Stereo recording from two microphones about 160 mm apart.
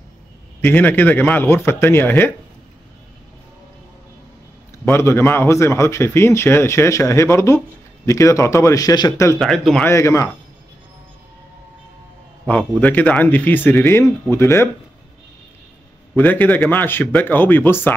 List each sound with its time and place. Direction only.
0.6 s a man's voice: 10° left (ahead or behind)
4.8 s a man's voice: 15° left (ahead or behind)
9.4 s speech: centre (ahead or behind)
9.8 s a man's voice: 15° left (ahead or behind)
12.4 s a man's voice: 10° left (ahead or behind)
16.2 s a man's voice: 10° left (ahead or behind)